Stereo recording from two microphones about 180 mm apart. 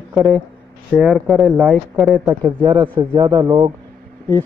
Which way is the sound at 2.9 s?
25° right (ahead or behind).